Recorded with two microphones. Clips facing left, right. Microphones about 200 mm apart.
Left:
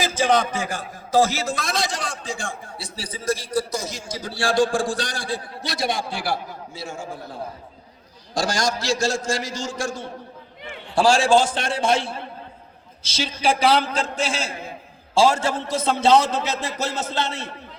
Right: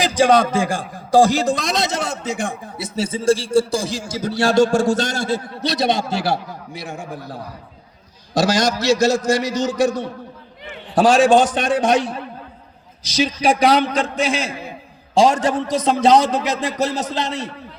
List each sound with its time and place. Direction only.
0.0 s a man's voice: 15° right (ahead or behind)
8.3 s a man's voice: 20° right (ahead or behind)
13.1 s a man's voice: 15° right (ahead or behind)